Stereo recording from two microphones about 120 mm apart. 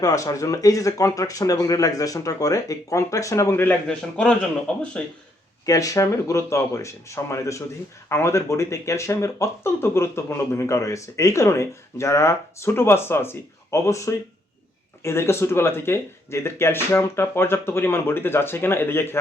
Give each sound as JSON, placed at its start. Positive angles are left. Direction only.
{"t": 0.0, "sound": "speech", "side_deg": 30}
{"t": 5.6, "sound": "speech", "side_deg": 30}